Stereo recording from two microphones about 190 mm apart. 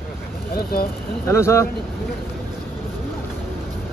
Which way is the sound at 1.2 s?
15° left (ahead or behind).